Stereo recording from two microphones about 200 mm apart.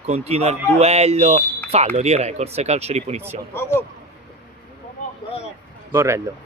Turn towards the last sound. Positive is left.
turn(degrees=-15)  # may be behind; listen again after turning